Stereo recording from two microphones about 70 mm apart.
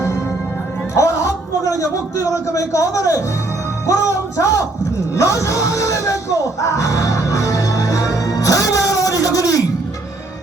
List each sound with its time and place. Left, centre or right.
0.9 s a man's voice: left
5.1 s music: left